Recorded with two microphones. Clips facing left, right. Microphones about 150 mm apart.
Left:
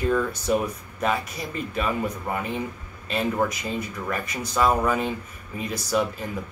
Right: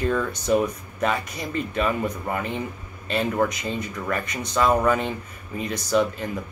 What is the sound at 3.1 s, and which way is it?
Speech, 5° left (ahead or behind).